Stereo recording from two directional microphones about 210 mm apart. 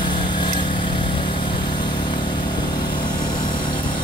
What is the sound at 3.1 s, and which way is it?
Vehicle, 40° left (ahead or behind).